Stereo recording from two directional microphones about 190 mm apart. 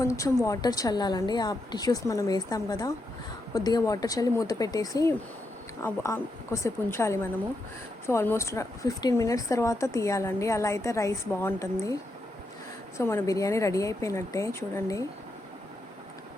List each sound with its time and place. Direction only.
0.0 s a woman's voice: 15° left (ahead or behind)
13.0 s a woman's voice: 15° left (ahead or behind)